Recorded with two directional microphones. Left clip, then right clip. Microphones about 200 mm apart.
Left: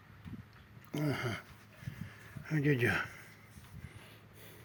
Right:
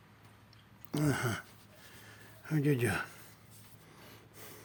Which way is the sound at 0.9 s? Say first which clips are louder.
Right 3 dB; 20° right (ahead or behind).